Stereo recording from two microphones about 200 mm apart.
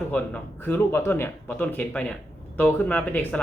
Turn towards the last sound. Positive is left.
turn(degrees=5)  # may be behind; listen again after turning